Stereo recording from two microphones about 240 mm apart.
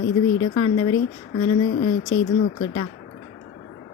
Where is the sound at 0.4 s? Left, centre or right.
Left.